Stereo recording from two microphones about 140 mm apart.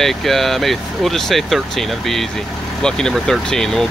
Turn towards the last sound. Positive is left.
turn(degrees=5)  # may be behind; listen again after turning